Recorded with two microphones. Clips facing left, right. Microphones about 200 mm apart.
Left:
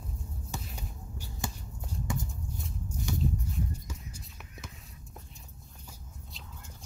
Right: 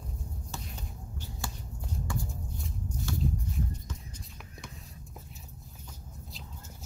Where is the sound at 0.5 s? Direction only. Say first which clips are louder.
Left 3 dB; 15° left (ahead or behind).